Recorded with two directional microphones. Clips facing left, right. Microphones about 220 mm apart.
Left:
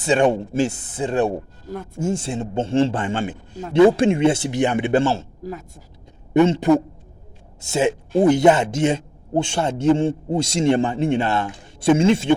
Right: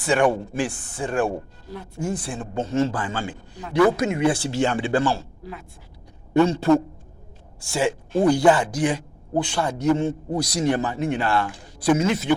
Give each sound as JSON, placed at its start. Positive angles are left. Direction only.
{"t": 0.0, "sound": "speech", "side_deg": 20}
{"t": 5.4, "sound": "speech", "side_deg": 45}
{"t": 6.3, "sound": "speech", "side_deg": 20}